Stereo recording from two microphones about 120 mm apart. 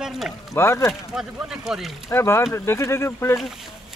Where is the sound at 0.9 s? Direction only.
5° right (ahead or behind).